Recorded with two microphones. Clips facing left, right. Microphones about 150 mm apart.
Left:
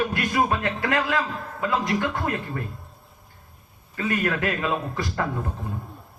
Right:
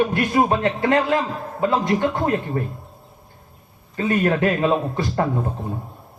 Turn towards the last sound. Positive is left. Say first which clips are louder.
# right 5 dB
turn(degrees=-30)  # may be behind; listen again after turning